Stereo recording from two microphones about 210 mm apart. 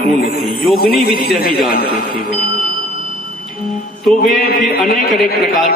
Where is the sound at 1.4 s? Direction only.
45° left (ahead or behind).